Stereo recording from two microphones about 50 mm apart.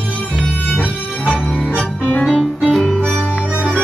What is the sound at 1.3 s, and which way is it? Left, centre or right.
Music, left.